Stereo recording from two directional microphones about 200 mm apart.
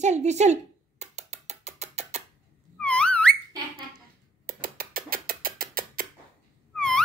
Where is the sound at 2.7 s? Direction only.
5° left (ahead or behind).